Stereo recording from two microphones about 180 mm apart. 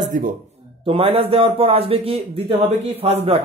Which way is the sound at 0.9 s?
30° right (ahead or behind).